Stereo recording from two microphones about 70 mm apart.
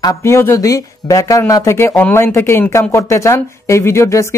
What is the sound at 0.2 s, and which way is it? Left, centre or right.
Speech, left.